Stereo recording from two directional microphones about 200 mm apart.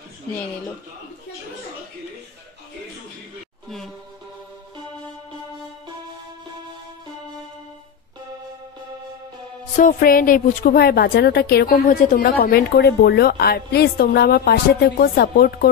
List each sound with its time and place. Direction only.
3.6 s music: centre (ahead or behind)
9.8 s a woman's voice: 40° left (ahead or behind)